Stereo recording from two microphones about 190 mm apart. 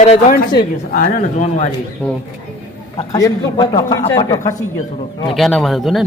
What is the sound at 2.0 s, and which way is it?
Speech, 10° left (ahead or behind).